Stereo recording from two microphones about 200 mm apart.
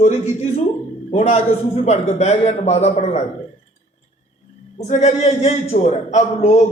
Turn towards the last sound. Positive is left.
turn(degrees=35)  # may be behind; listen again after turning